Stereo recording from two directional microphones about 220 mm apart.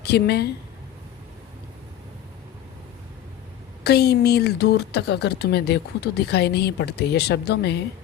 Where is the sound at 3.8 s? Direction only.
45° left (ahead or behind).